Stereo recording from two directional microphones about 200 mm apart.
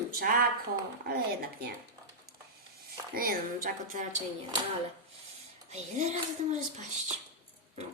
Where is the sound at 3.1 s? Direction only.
45° right (ahead or behind).